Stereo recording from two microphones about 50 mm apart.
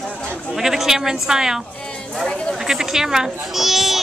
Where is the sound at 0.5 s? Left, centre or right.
Centre.